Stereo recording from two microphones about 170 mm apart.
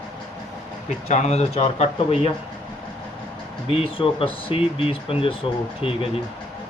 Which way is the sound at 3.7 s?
30° left (ahead or behind).